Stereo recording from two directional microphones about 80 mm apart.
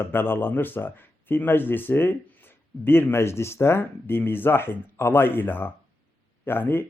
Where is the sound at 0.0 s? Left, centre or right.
Left.